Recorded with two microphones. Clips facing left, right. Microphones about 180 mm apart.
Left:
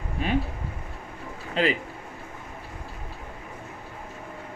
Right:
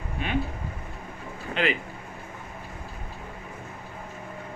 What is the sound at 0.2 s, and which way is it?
Speech, 35° left (ahead or behind).